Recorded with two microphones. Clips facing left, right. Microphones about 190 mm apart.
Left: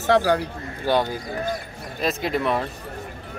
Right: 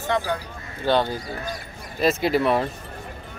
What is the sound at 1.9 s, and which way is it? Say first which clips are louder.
Speech: right 4 dB; centre (ahead or behind).